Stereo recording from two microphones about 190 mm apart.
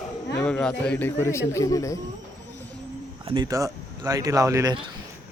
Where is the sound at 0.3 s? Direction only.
5° left (ahead or behind).